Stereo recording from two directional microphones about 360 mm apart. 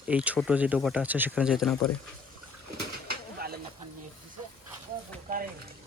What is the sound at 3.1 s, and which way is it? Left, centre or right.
Bird, right.